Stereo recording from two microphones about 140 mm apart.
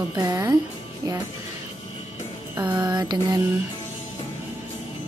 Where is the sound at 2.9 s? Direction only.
30° right (ahead or behind).